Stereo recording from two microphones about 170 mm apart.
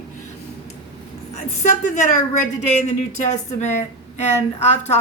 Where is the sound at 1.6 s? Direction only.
45° left (ahead or behind).